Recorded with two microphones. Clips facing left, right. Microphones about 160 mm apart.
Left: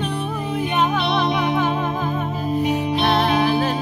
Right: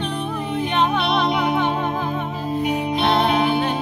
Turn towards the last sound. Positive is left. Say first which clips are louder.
# even
turn(degrees=0)  # may be behind; listen again after turning